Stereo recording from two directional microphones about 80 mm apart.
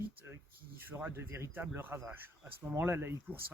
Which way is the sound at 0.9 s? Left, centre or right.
Right.